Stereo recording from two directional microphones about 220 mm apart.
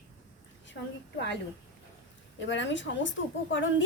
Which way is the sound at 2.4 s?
55° left (ahead or behind).